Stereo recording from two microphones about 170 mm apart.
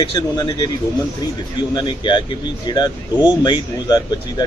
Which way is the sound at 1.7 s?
25° left (ahead or behind).